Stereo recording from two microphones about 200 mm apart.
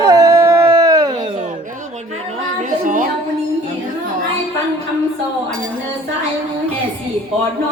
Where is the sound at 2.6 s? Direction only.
40° right (ahead or behind).